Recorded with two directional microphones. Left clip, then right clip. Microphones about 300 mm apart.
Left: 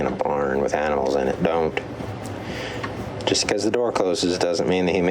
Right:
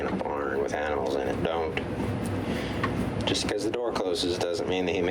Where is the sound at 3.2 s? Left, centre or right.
Left.